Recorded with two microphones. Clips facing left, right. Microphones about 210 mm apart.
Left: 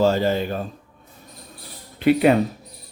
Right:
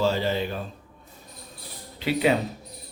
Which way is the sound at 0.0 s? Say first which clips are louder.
Left 5 dB; 45° left (ahead or behind).